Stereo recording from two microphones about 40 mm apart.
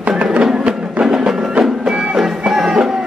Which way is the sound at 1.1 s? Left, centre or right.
Centre.